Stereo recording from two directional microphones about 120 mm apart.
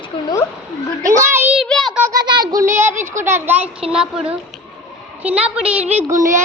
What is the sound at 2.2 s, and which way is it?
Child singing, 35° right (ahead or behind).